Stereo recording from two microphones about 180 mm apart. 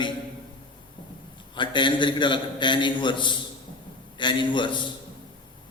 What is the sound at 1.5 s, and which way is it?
A man's voice, 25° left (ahead or behind).